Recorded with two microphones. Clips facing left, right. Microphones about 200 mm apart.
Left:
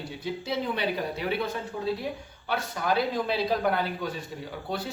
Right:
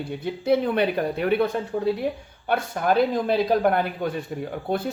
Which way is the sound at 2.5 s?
55° right (ahead or behind).